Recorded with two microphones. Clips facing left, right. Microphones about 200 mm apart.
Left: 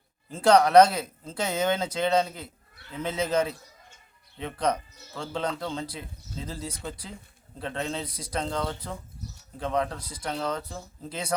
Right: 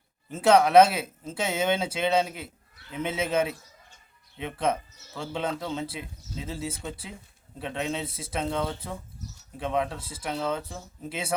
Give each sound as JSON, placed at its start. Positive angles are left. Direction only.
{"t": 0.3, "sound": "speech", "side_deg": -5}
{"t": 4.5, "sound": "speech", "side_deg": -5}
{"t": 5.9, "sound": "speech", "side_deg": -20}
{"t": 6.4, "sound": "speech", "side_deg": -5}